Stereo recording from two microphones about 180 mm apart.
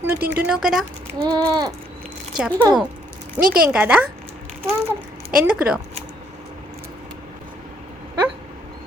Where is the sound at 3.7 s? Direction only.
10° right (ahead or behind).